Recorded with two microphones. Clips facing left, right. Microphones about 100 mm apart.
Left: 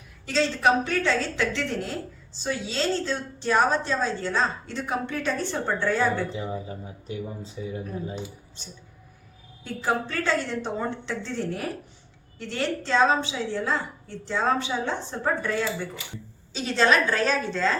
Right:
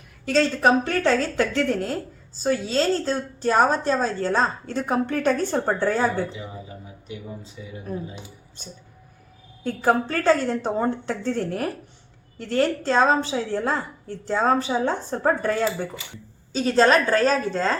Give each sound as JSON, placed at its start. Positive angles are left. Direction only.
{"t": 0.3, "sound": "a woman's voice", "side_deg": -50}
{"t": 7.6, "sound": "speech", "side_deg": 35}
{"t": 9.6, "sound": "a woman's voice", "side_deg": -45}